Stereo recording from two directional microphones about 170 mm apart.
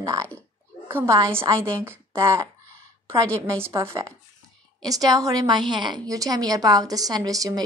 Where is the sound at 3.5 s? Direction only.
15° right (ahead or behind).